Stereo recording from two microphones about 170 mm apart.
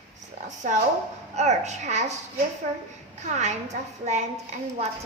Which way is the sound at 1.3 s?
40° right (ahead or behind).